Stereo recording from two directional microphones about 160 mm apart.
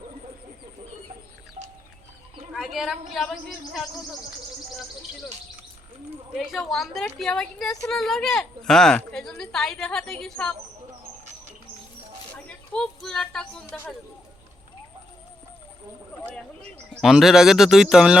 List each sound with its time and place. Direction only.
1.6 s music: 55° right (ahead or behind)
2.5 s a woman's voice: centre (ahead or behind)
6.3 s a woman's voice: centre (ahead or behind)
12.3 s a sound: 5° left (ahead or behind)
13.7 s speech: 10° left (ahead or behind)
16.9 s a woman's voice: centre (ahead or behind)